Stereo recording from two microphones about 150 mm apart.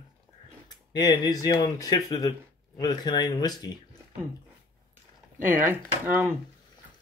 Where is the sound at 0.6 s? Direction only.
30° left (ahead or behind).